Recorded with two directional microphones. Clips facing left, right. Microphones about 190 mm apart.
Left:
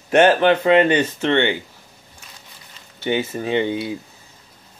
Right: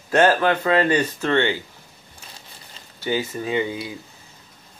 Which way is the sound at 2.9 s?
25° left (ahead or behind).